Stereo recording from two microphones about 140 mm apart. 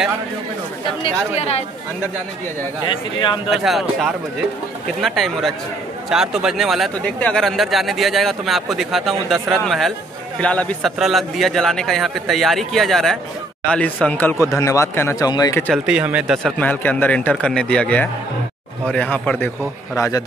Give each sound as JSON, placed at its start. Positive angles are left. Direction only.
{"t": 1.0, "sound": "speech", "side_deg": 45}
{"t": 2.9, "sound": "a man's voice", "side_deg": 35}
{"t": 3.4, "sound": "a man's voice", "side_deg": 0}
{"t": 11.0, "sound": "speech", "side_deg": 0}
{"t": 15.7, "sound": "speech", "side_deg": -10}
{"t": 16.5, "sound": "a man's voice", "side_deg": 10}
{"t": 20.0, "sound": "speech", "side_deg": 25}